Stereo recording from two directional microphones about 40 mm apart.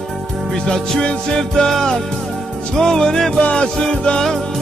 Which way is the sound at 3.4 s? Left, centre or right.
Left.